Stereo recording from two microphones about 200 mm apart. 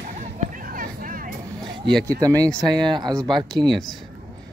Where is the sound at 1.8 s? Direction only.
60° right (ahead or behind).